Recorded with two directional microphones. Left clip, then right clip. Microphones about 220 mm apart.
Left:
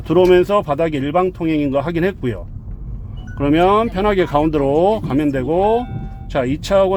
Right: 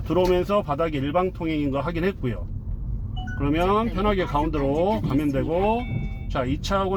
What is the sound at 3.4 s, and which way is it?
Speech, 50° left (ahead or behind).